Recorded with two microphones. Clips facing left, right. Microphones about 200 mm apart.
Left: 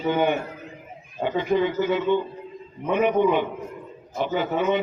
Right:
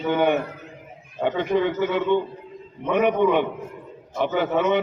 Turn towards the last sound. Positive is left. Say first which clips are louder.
# right 2 dB
turn(degrees=-65)  # may be behind; listen again after turning